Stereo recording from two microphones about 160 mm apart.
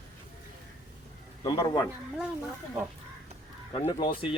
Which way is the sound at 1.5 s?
25° left (ahead or behind).